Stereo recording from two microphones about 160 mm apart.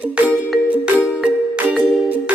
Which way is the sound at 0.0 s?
10° right (ahead or behind).